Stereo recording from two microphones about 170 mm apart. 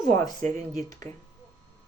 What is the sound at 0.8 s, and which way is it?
Speech, 20° left (ahead or behind).